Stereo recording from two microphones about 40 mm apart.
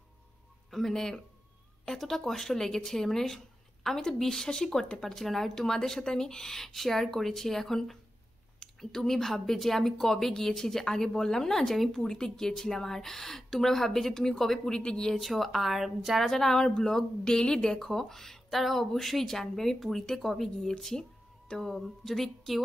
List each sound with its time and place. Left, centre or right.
0.7 s speech: centre
15.1 s speech: centre
16.3 s speech: centre
21.5 s speech: centre